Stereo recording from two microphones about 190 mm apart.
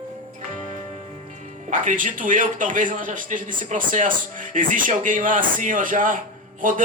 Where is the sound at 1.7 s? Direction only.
45° right (ahead or behind).